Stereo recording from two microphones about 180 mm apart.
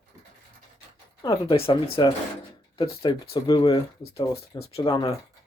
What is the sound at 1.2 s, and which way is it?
Speech, 25° left (ahead or behind).